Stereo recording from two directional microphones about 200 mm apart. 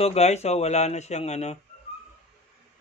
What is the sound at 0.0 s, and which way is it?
Speech, 30° left (ahead or behind).